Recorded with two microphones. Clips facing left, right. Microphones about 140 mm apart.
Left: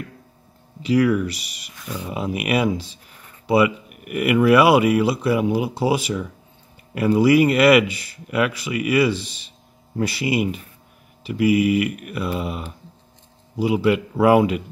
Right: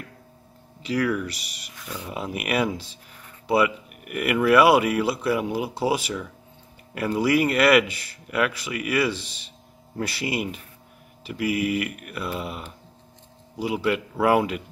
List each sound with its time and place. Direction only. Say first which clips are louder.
0.8 s speech: left 7 dB; 10° left (ahead or behind)